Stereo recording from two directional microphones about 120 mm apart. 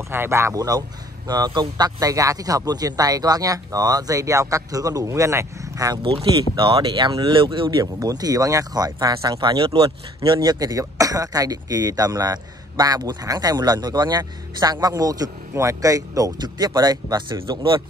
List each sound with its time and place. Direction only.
0.1 s speech: 20° right (ahead or behind)
6.5 s speech: 45° right (ahead or behind)